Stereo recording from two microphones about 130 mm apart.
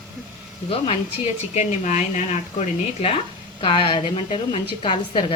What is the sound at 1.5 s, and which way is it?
Speech, 65° left (ahead or behind).